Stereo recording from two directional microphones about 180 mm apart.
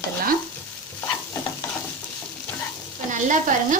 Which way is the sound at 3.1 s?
45° right (ahead or behind).